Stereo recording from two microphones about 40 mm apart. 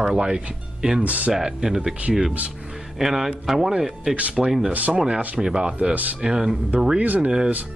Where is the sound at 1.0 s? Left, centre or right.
Right.